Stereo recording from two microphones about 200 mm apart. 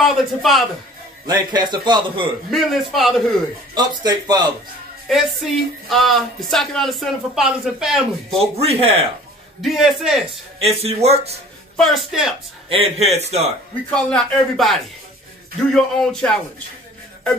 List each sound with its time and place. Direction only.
0.0 s speech: centre (ahead or behind)
1.2 s a man's voice: 20° right (ahead or behind)
2.5 s speech: centre (ahead or behind)
3.7 s a man's voice: 20° right (ahead or behind)
5.0 s speech: centre (ahead or behind)
8.5 s a man's voice: 30° right (ahead or behind)
9.6 s speech: centre (ahead or behind)
10.6 s a man's voice: 30° right (ahead or behind)
11.7 s speech: centre (ahead or behind)
12.6 s a man's voice: 30° right (ahead or behind)
13.8 s speech: 5° left (ahead or behind)